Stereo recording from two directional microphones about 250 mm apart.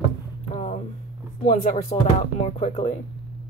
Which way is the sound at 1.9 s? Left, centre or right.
Left.